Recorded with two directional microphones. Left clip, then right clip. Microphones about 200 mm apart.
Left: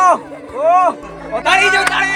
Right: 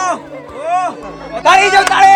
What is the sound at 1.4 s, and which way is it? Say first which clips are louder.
Speech: right 4 dB; 35° right (ahead or behind).